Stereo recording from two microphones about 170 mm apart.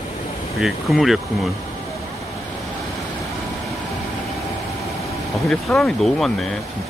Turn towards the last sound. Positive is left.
turn(degrees=0)  # may be behind; listen again after turning